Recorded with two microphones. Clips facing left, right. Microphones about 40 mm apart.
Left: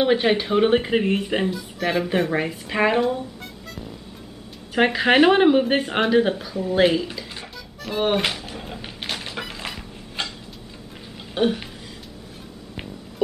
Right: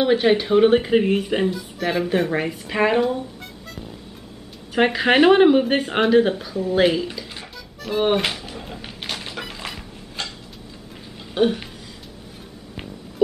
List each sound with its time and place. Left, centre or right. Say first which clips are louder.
0.0 s speech: right 2 dB; centre
4.7 s speech: even; centre
7.8 s music: right 2 dB; centre
11.3 s speech: right 2 dB; centre